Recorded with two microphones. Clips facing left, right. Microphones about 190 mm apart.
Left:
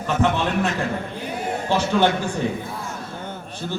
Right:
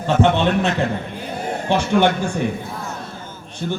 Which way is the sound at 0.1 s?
25° right (ahead or behind).